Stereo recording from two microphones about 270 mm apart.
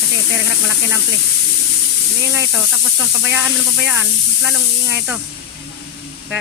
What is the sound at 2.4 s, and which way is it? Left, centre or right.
Speech, centre.